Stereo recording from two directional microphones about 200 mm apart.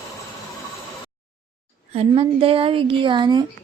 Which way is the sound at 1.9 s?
30° right (ahead or behind).